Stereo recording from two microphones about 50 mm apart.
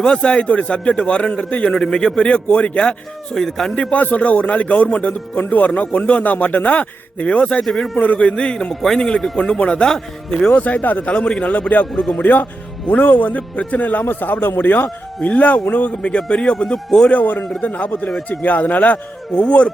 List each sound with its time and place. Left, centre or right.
0.0 s speech: centre
1.7 s speech: centre
3.3 s speech: centre
3.9 s speech: left
7.6 s a man's voice: centre
7.9 s speech: left
8.7 s speech: centre
9.6 s a man's voice: left
11.1 s a man's voice: centre
14.0 s a man's voice: left
15.2 s speech: left; by 17.1 s centre
17.1 s a man's voice: left